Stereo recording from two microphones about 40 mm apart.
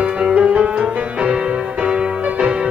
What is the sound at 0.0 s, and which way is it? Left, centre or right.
Music, right.